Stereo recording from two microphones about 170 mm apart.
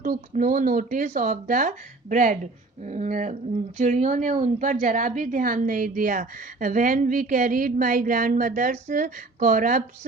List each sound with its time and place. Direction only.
0.0 s a woman's voice: 50° right (ahead or behind)